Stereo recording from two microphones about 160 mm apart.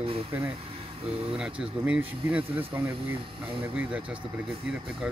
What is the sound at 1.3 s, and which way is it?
Speech, 5° right (ahead or behind).